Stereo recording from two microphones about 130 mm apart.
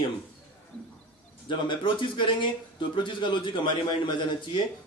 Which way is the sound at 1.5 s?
35° left (ahead or behind).